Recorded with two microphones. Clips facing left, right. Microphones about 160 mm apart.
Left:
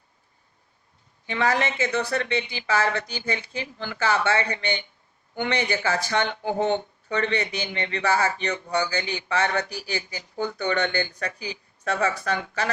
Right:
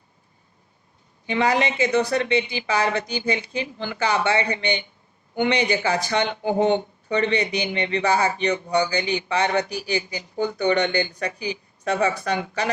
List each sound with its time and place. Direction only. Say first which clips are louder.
1.3 s speech: right 3 dB; 15° right (ahead or behind)